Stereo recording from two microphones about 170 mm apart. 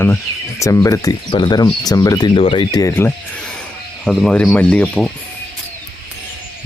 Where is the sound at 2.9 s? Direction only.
15° left (ahead or behind).